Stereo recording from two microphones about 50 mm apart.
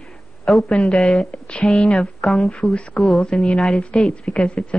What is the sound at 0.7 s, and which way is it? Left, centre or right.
Speech, left.